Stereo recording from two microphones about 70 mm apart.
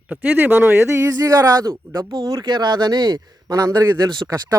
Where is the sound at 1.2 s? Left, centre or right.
Right.